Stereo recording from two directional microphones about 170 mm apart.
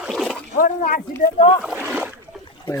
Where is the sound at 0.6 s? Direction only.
55° left (ahead or behind).